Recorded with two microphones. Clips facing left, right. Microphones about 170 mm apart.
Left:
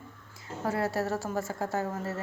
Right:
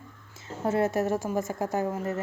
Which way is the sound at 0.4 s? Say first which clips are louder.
Right 4 dB; 20° right (ahead or behind).